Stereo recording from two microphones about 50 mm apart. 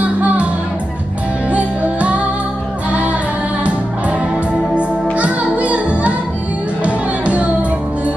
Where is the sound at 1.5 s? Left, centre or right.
Right.